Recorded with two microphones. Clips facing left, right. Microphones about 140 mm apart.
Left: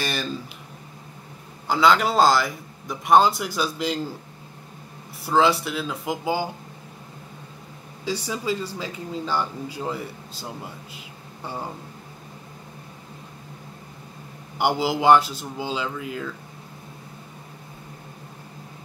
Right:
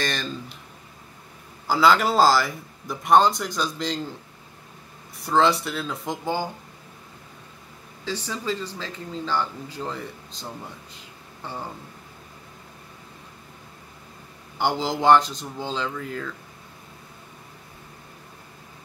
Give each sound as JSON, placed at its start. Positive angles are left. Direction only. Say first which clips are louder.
{"t": 0.0, "sound": "speech", "louder": "even", "side_deg": 5}
{"t": 1.7, "sound": "speech", "louder": "even", "side_deg": 0}
{"t": 5.2, "sound": "speech", "louder": "left 1 dB", "side_deg": 5}
{"t": 8.0, "sound": "speech", "louder": "left 3 dB", "side_deg": 10}
{"t": 14.6, "sound": "speech", "louder": "left 2 dB", "side_deg": 5}